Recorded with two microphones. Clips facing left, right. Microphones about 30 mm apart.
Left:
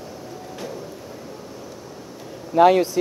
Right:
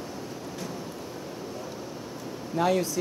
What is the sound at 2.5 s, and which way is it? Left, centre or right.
Speech, left.